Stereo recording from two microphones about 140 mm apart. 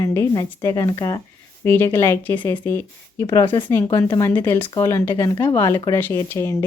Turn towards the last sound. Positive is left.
turn(degrees=20)  # may be behind; listen again after turning